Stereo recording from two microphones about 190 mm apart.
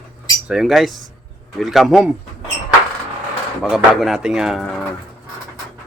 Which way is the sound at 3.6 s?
Centre (ahead or behind).